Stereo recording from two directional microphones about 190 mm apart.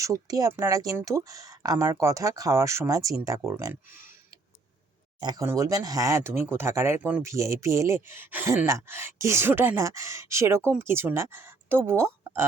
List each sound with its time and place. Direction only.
0.0 s speech: 20° right (ahead or behind)
5.2 s speech: 20° right (ahead or behind)